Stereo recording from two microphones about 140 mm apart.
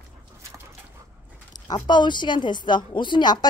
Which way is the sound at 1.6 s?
30° left (ahead or behind).